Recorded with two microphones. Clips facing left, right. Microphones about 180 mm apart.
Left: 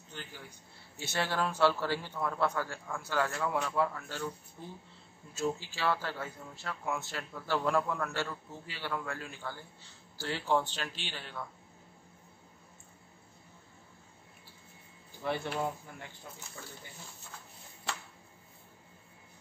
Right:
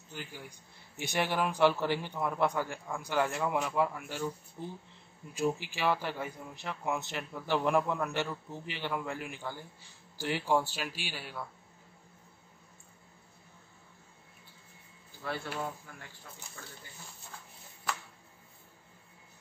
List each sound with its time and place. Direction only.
0.1 s speech: 10° right (ahead or behind)
15.2 s speech: 20° left (ahead or behind)